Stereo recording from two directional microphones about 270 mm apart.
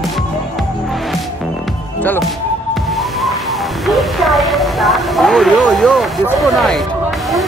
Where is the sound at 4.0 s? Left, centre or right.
Centre.